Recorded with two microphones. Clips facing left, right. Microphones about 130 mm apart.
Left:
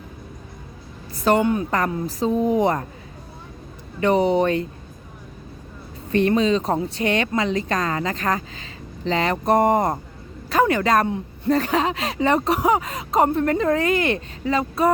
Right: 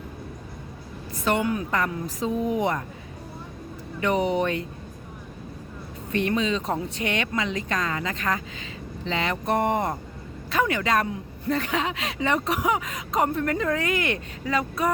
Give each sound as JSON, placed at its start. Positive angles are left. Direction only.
{"t": 1.1, "sound": "a woman's voice", "side_deg": 35}
{"t": 4.0, "sound": "speech", "side_deg": 35}
{"t": 6.1, "sound": "speech", "side_deg": 35}